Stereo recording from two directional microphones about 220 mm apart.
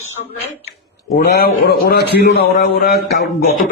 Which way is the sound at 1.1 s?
45° left (ahead or behind).